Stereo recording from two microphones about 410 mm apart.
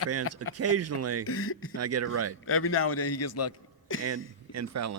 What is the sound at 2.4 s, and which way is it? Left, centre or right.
A man's voice, left.